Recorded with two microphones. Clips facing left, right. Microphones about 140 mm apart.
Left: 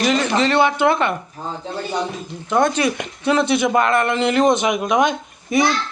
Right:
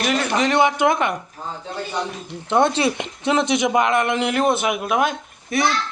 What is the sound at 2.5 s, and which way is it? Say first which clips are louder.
A man's voice: even; 25° right (ahead or behind).